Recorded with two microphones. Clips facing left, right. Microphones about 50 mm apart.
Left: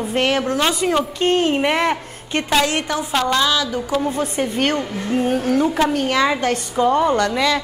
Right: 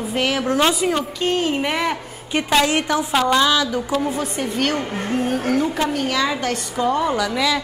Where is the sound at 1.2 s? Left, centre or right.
Left.